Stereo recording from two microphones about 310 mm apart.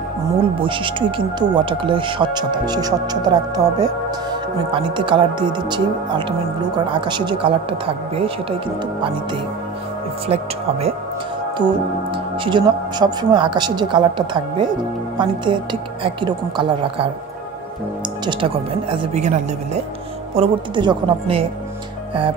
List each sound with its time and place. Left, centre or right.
0.6 s speech: centre
10.2 s speech: centre
12.4 s speech: centre
18.2 s speech: centre